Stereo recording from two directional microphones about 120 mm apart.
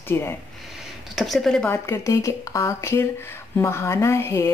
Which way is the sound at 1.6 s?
20° left (ahead or behind).